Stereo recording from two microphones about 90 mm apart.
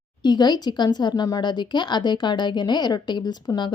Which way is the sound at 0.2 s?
50° left (ahead or behind).